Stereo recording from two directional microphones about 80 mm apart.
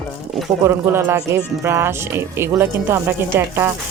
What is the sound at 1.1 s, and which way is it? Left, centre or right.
A woman's voice, right.